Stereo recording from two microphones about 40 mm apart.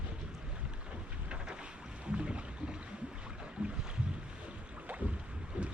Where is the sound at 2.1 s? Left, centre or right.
Right.